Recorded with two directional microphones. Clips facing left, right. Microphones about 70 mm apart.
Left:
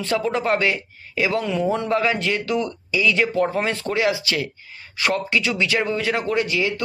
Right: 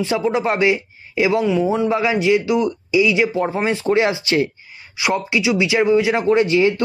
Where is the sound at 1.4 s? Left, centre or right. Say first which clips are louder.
Right 5 dB; centre; by 4.5 s right.